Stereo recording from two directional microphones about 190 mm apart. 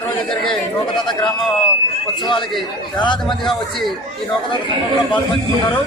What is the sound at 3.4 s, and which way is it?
Speech, centre (ahead or behind).